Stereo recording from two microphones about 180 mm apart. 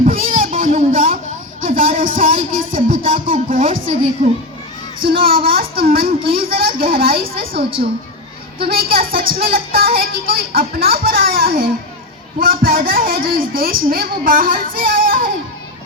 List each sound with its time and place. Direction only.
0.0 s a sound: 50° right (ahead or behind)
1.6 s a woman's voice: 50° right (ahead or behind)
5.0 s speech: 55° right (ahead or behind)
8.6 s a woman's voice: 55° right (ahead or behind)